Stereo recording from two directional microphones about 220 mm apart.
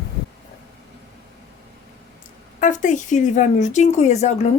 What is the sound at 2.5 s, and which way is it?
A woman's voice, 35° left (ahead or behind).